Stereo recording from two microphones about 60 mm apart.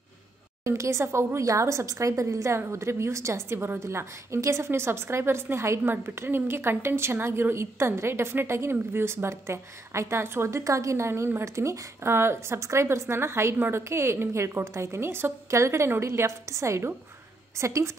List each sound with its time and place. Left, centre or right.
0.7 s a woman's voice: right
2.6 s a woman's voice: right
10.6 s a woman's voice: right
12.0 s a woman's voice: right